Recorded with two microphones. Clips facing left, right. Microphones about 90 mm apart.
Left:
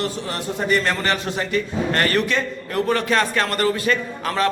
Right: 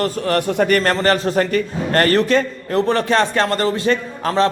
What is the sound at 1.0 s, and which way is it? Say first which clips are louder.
A man's voice: right 7 dB; 40° right (ahead or behind).